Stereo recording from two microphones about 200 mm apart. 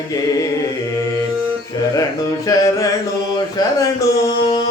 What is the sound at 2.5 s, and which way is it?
Music, 15° left (ahead or behind).